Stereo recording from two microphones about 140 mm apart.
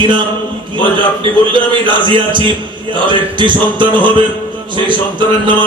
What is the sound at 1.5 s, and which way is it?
A man's voice, 35° right (ahead or behind).